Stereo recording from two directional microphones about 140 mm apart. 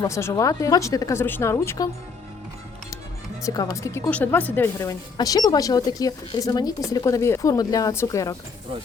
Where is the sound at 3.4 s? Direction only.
25° left (ahead or behind).